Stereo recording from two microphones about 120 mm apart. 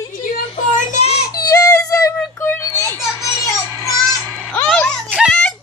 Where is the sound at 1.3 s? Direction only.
30° left (ahead or behind).